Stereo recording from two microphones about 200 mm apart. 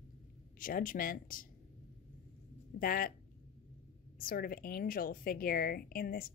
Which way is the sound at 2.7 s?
45° left (ahead or behind).